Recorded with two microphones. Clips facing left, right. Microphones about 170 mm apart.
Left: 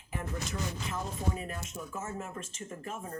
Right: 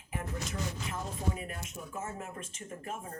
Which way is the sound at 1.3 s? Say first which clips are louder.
Left 2 dB; 35° left (ahead or behind).